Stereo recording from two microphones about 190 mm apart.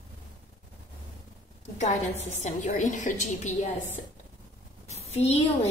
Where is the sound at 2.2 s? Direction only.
40° left (ahead or behind).